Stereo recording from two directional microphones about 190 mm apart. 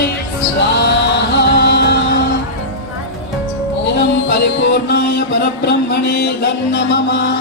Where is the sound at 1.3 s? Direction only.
65° left (ahead or behind).